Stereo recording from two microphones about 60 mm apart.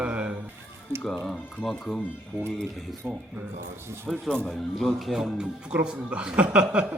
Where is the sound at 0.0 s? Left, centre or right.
Right.